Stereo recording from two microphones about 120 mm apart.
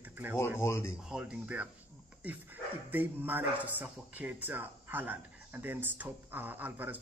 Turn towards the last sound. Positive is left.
turn(degrees=-15)  # may be behind; listen again after turning